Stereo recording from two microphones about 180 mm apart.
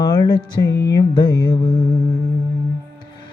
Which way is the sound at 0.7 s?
70° left (ahead or behind).